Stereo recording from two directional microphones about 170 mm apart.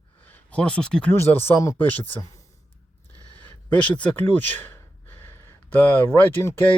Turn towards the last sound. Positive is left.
turn(degrees=15)  # may be behind; listen again after turning